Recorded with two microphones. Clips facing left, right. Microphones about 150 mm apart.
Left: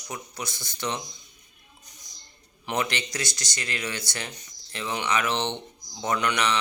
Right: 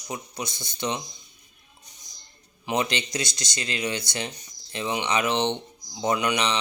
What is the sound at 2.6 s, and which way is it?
Speech, 20° right (ahead or behind).